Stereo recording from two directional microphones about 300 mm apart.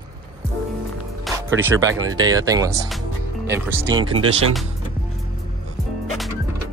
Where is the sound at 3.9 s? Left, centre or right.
Centre.